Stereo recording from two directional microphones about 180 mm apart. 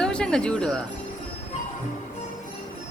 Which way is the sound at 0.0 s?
5° left (ahead or behind).